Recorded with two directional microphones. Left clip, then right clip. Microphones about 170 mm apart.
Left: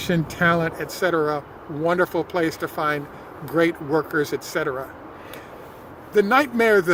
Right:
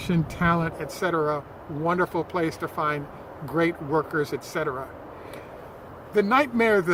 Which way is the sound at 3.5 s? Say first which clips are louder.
Left 4 dB; 40° left (ahead or behind).